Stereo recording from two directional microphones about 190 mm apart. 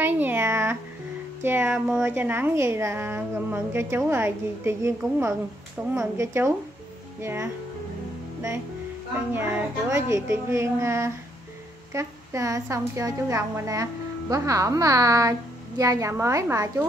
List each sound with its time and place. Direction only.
0.0 s a sound: 10° right (ahead or behind)
1.4 s a woman's voice: 10° right (ahead or behind)
9.3 s a woman's voice: 10° right (ahead or behind)